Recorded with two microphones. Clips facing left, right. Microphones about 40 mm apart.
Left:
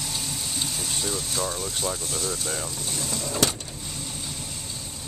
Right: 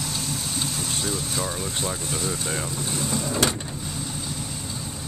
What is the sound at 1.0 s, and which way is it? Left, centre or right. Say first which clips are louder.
Vehicle: even; centre.